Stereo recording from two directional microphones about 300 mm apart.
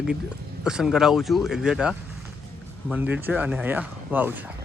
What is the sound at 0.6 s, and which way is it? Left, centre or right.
Speech, centre.